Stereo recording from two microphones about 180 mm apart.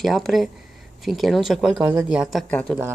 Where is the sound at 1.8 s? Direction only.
15° right (ahead or behind).